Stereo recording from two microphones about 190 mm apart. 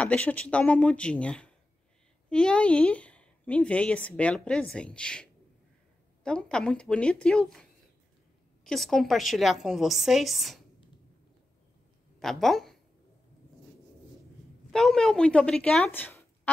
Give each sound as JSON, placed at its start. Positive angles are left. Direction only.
{"t": 0.0, "sound": "a woman's voice", "side_deg": 5}
{"t": 8.6, "sound": "a woman's voice", "side_deg": 0}
{"t": 12.2, "sound": "a woman's voice", "side_deg": 0}
{"t": 14.7, "sound": "a woman's voice", "side_deg": 0}